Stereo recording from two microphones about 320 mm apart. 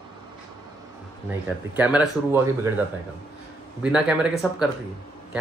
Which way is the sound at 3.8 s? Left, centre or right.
Centre.